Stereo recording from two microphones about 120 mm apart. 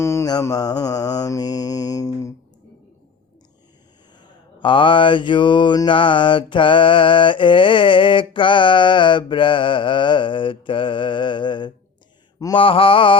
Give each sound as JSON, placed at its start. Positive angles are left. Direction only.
{"t": 0.0, "sound": "mantra", "side_deg": 25}
{"t": 4.2, "sound": "mantra", "side_deg": 40}